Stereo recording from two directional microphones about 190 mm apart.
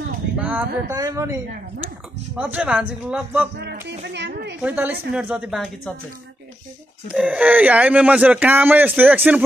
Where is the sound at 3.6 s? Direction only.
60° right (ahead or behind).